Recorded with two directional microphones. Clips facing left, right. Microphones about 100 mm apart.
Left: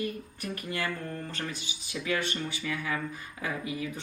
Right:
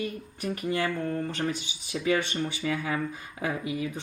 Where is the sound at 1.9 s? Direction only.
25° right (ahead or behind).